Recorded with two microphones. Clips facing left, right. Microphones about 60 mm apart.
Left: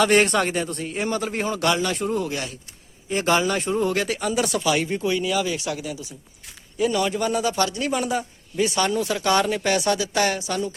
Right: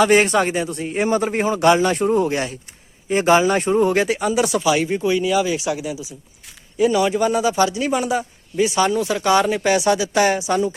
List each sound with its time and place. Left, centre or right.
0.0 s a man's voice: centre
0.9 s a man's voice: right
4.1 s a man's voice: centre